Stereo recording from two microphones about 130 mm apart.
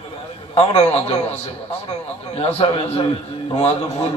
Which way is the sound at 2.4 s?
50° left (ahead or behind).